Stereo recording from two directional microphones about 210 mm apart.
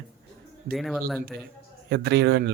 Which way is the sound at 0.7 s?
Centre (ahead or behind).